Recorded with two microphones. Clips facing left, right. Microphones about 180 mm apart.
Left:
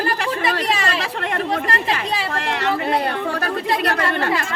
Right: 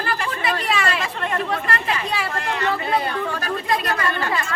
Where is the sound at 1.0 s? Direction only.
75° left (ahead or behind).